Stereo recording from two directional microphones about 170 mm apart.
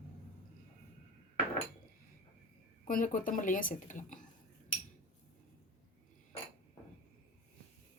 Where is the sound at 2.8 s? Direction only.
50° left (ahead or behind).